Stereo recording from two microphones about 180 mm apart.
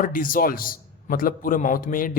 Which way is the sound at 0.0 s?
50° left (ahead or behind).